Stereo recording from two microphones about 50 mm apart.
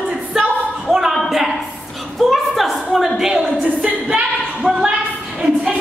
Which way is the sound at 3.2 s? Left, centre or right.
Centre.